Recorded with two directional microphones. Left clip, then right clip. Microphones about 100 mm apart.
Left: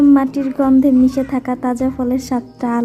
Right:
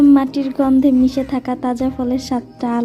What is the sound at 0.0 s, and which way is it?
A woman's voice, 30° right (ahead or behind).